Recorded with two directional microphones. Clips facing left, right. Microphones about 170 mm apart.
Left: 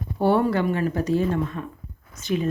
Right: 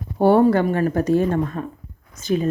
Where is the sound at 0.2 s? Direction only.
45° right (ahead or behind).